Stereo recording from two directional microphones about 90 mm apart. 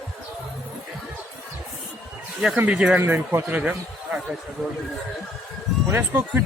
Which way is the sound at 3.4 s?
15° right (ahead or behind).